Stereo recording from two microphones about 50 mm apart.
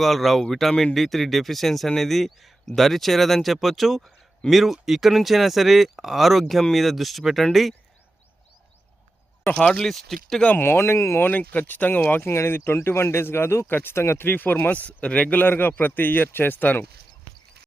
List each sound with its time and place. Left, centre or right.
0.0 s speech: centre
9.5 s speech: left
9.8 s speech: centre
10.5 s speech: left
11.2 s speech: left
12.3 s speech: left
15.4 s speech: left